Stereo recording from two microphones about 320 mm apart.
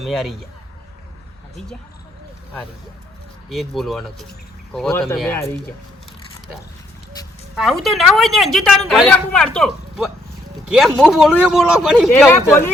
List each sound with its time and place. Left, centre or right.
0.0 s speech: centre
3.5 s speech: centre
7.5 s speech: centre